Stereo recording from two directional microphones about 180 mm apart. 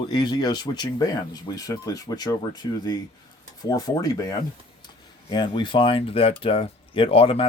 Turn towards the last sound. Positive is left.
turn(degrees=30)  # may be behind; listen again after turning